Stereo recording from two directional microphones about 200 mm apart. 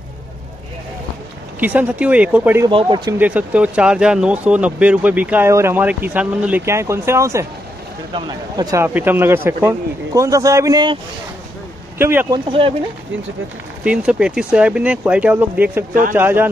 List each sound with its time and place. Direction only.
1.6 s speech: 10° right (ahead or behind)
2.7 s speech: 25° right (ahead or behind)
3.2 s speech: 5° right (ahead or behind)
12.0 s speech: 10° right (ahead or behind)
12.4 s speech: 25° right (ahead or behind)
13.8 s speech: 5° right (ahead or behind)
15.9 s speech: 45° right (ahead or behind)
16.2 s speech: 10° right (ahead or behind)